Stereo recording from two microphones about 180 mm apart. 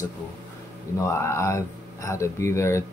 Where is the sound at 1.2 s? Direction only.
15° left (ahead or behind).